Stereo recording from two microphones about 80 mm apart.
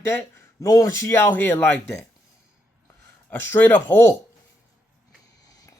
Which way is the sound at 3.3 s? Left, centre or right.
Left.